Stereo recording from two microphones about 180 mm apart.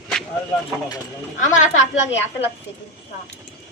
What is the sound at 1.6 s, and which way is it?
Speech, 40° left (ahead or behind).